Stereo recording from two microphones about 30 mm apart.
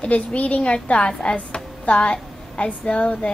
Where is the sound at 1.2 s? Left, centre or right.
Left.